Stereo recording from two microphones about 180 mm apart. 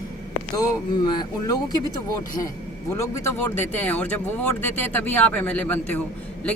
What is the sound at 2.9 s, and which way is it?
A man's voice, 15° left (ahead or behind).